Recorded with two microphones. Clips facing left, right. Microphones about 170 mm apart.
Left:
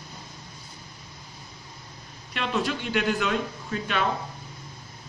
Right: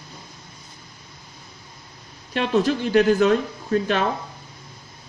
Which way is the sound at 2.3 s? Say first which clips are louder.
Right 7 dB; 40° right (ahead or behind).